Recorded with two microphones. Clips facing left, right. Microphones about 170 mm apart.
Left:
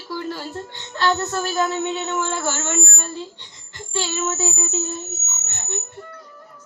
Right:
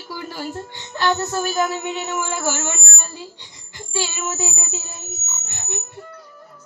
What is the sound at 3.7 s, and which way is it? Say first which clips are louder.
Frog: left 1 dB; 10° right (ahead or behind).